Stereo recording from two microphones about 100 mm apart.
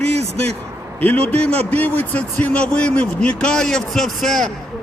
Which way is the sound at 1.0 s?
15° left (ahead or behind).